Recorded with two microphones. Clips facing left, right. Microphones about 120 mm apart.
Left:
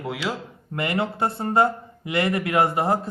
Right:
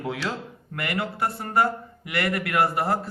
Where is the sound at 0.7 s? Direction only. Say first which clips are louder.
Left 4 dB; 25° left (ahead or behind).